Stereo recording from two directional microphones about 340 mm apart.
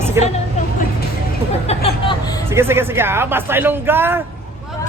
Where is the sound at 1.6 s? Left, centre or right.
Centre.